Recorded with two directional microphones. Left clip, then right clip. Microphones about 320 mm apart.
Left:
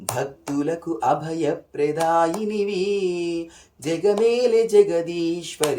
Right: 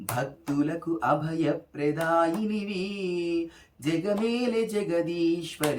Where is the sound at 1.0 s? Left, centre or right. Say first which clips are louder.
Left 4 dB; centre.